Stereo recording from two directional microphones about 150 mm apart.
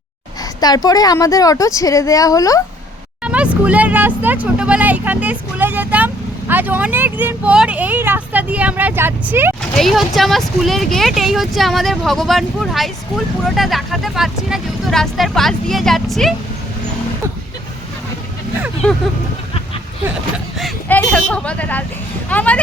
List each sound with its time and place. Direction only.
0.6 s a woman's voice: 25° left (ahead or behind)
3.2 s speech: 10° right (ahead or behind)
9.7 s speech: centre (ahead or behind)
20.8 s speech: 10° left (ahead or behind)